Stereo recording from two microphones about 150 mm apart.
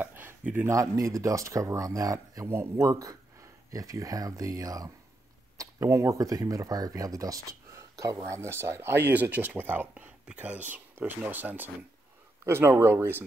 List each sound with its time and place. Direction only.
0.0 s speech: 15° right (ahead or behind)